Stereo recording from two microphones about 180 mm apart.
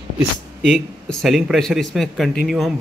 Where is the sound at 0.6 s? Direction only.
5° left (ahead or behind).